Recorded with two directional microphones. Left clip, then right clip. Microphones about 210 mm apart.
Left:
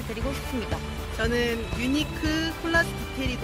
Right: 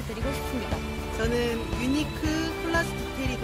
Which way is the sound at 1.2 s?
20° right (ahead or behind).